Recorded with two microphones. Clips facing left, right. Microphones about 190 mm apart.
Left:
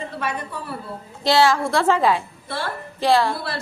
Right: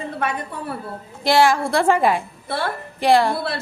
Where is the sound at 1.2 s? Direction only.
15° right (ahead or behind).